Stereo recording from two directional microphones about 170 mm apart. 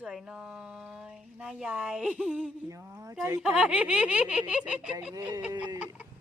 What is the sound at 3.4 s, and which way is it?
Speech, 5° right (ahead or behind).